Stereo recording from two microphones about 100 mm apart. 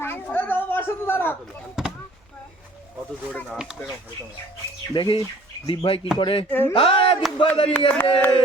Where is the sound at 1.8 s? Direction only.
5° right (ahead or behind).